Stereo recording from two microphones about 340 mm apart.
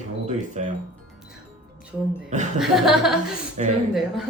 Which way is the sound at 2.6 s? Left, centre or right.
Centre.